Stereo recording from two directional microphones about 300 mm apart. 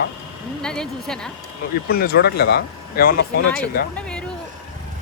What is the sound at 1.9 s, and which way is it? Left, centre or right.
Speech, left.